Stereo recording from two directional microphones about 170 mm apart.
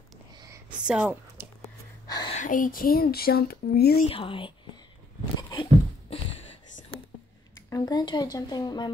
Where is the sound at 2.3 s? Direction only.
50° left (ahead or behind); by 4.0 s 65° left (ahead or behind).